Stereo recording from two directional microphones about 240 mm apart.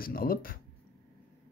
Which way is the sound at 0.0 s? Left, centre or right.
Left.